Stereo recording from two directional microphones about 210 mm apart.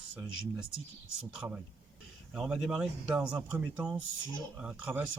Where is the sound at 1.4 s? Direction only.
5° right (ahead or behind).